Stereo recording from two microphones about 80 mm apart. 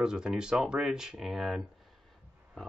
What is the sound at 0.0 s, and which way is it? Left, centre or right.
Speech, centre.